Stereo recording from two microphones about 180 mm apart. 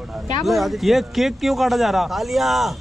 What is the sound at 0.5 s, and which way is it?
Speech, centre (ahead or behind).